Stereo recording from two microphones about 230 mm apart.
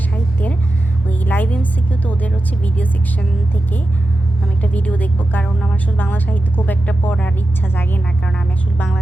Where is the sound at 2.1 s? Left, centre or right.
Centre.